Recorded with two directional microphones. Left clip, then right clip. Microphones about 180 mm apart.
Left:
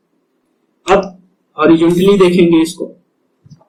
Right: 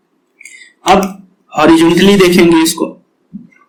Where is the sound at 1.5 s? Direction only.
45° right (ahead or behind).